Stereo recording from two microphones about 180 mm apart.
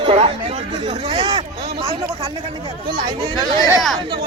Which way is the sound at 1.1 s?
25° right (ahead or behind).